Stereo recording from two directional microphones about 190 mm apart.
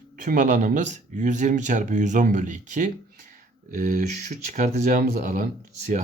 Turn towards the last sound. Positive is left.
turn(degrees=-40)  # may be behind; listen again after turning